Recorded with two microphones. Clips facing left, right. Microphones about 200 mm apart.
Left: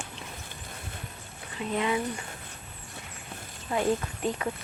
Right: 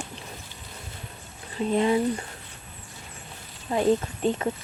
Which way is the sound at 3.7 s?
25° right (ahead or behind).